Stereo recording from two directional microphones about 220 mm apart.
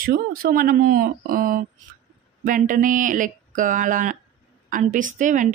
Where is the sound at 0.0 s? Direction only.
40° right (ahead or behind).